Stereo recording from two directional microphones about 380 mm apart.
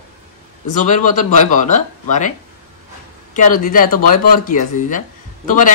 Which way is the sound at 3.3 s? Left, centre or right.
Left.